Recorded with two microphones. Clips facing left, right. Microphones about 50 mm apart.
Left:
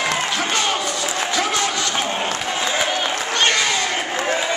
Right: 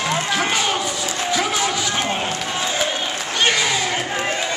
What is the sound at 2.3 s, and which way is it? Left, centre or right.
Crowd, centre.